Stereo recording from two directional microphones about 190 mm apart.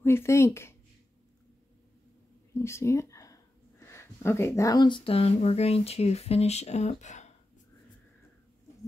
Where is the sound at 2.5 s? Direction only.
15° left (ahead or behind); by 7.2 s 40° left (ahead or behind).